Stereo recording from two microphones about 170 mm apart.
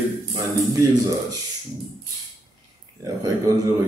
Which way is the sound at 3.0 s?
20° right (ahead or behind).